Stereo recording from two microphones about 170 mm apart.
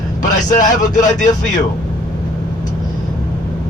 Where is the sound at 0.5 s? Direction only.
50° left (ahead or behind).